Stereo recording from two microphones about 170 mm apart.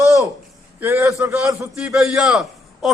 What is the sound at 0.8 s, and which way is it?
Speech, 15° right (ahead or behind).